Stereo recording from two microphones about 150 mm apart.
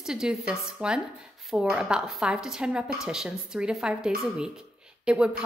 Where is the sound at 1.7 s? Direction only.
5° right (ahead or behind).